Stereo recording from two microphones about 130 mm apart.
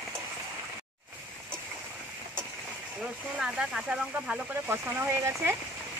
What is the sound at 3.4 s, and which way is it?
Speech, 5° right (ahead or behind).